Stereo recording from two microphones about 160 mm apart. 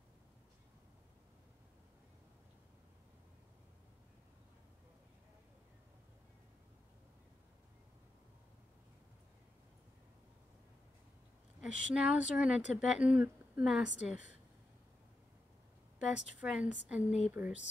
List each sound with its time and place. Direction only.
11.6 s speech: 5° right (ahead or behind)
16.1 s speech: 5° right (ahead or behind)